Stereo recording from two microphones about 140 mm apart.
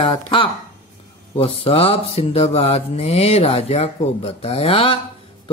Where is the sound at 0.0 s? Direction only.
40° left (ahead or behind).